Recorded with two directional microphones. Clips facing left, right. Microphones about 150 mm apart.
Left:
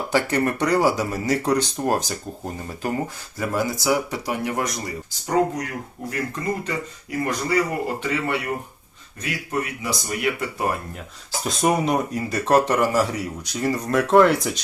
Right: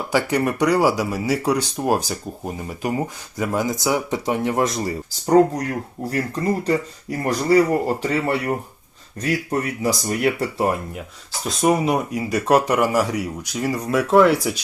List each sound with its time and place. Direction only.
0.1 s speech: 10° right (ahead or behind); by 10.8 s 30° right (ahead or behind)
11.4 s speech: centre (ahead or behind)